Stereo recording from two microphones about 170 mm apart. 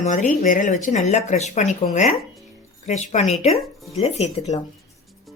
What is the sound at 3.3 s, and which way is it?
Speech, centre (ahead or behind).